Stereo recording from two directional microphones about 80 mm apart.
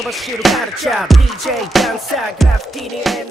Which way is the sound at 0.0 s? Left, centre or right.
Centre.